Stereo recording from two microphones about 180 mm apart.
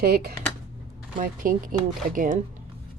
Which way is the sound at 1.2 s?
50° right (ahead or behind).